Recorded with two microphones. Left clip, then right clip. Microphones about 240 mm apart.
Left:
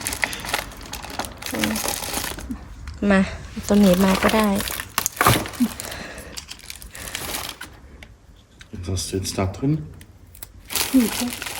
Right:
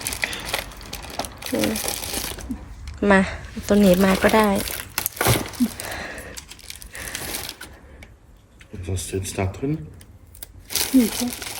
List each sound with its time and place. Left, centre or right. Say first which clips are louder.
0.0 s crumpling: left 1 dB; centre
6.7 s crushing: right 3 dB; centre
8.8 s speech: left 3 dB; centre
9.1 s speech: left 1 dB; left
10.7 s crumpling: even; centre